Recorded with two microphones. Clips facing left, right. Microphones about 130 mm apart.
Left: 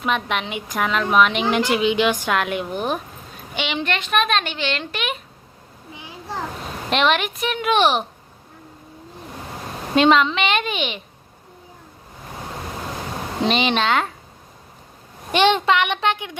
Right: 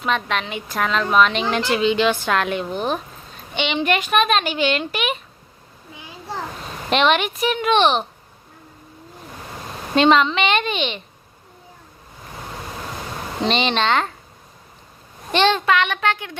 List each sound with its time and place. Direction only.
0.0 s a woman's voice: 15° left (ahead or behind)
3.8 s a woman's voice: 10° right (ahead or behind)
6.9 s speech: centre (ahead or behind)
9.9 s speech: 5° left (ahead or behind)
13.4 s speech: 5° left (ahead or behind)
15.3 s a woman's voice: 15° left (ahead or behind)